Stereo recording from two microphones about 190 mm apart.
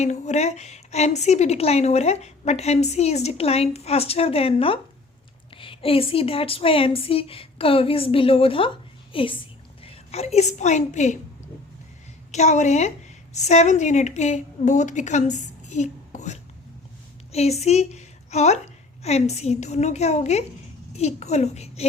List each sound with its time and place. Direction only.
0.0 s a woman's voice: 35° left (ahead or behind)
12.3 s a woman's voice: 35° left (ahead or behind)